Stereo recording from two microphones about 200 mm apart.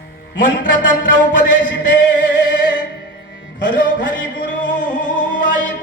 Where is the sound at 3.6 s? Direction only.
70° left (ahead or behind).